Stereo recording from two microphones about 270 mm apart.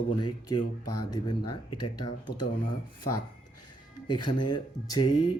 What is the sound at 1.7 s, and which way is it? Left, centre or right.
Speech, left.